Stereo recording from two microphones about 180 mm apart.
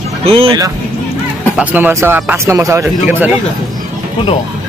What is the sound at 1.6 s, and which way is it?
Speech, 10° right (ahead or behind).